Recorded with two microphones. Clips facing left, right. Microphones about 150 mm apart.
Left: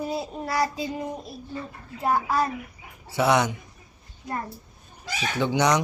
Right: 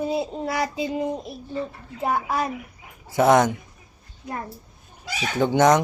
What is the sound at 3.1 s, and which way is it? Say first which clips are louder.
Speech: right 5 dB; 45° right (ahead or behind).